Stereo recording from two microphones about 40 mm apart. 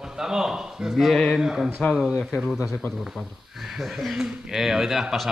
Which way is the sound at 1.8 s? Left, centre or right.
Left.